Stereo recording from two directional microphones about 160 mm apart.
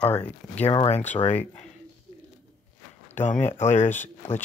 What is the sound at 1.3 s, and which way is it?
Speech, 10° left (ahead or behind).